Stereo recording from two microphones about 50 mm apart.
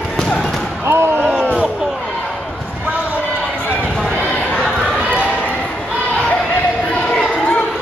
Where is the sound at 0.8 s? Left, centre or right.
Right.